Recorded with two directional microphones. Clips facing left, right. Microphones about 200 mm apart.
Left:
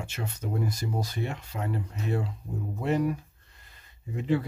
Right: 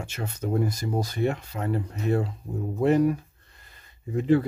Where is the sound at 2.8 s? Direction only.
45° right (ahead or behind).